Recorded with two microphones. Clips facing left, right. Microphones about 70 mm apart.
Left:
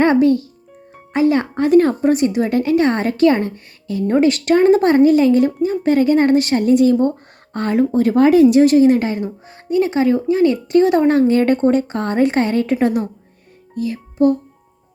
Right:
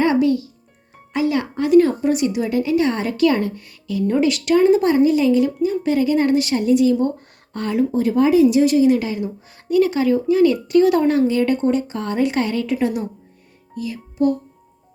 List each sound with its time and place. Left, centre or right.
0.0 s a child's voice: left
9.6 s speech: left
11.2 s speech: left
13.7 s music: left